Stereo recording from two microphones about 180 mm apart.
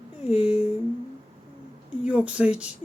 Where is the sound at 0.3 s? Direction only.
5° right (ahead or behind).